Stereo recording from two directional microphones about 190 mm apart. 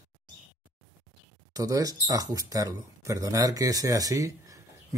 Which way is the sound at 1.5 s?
20° right (ahead or behind).